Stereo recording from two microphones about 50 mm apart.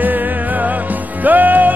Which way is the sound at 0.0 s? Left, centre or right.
Right.